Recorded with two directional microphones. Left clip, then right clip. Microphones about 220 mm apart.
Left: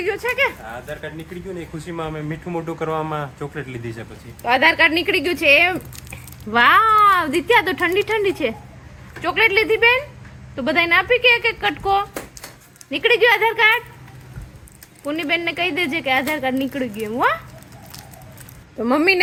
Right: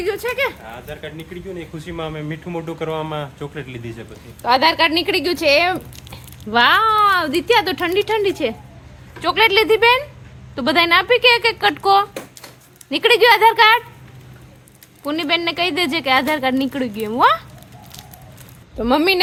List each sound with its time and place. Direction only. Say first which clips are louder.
0.0 s speech: left 1 dB; 10° right (ahead or behind)
4.4 s speech: even; 15° right (ahead or behind)
15.0 s speech: right 2 dB; 15° right (ahead or behind)